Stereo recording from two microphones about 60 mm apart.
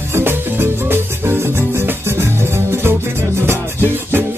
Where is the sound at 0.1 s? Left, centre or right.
Right.